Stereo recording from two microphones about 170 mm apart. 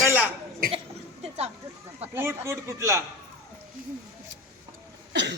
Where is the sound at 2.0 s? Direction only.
15° right (ahead or behind).